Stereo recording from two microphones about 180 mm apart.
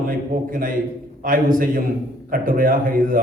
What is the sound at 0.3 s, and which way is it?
A man's voice, 50° right (ahead or behind).